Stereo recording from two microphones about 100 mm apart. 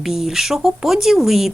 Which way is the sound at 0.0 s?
5° right (ahead or behind).